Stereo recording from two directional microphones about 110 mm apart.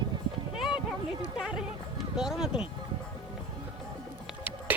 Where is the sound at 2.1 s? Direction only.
5° right (ahead or behind).